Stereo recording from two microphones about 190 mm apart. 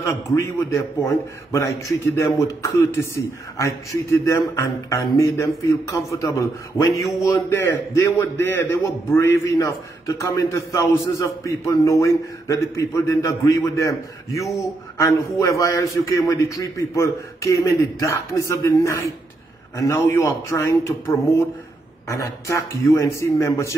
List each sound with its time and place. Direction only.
0.1 s a man's voice: 15° left (ahead or behind)
2.0 s a man's voice: 15° left (ahead or behind)